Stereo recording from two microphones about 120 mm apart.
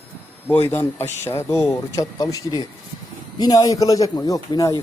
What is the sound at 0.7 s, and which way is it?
A man's voice, 20° left (ahead or behind).